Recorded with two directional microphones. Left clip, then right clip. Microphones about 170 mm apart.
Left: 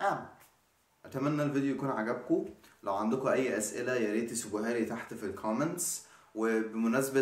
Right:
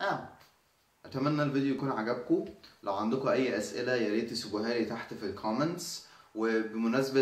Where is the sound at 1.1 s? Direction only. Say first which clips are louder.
Right 1 dB; 5° left (ahead or behind).